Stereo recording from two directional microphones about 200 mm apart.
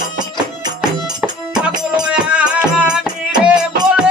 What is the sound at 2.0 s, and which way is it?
Music, 5° right (ahead or behind).